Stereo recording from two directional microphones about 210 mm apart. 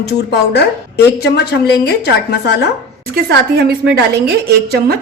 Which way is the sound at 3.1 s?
50° right (ahead or behind).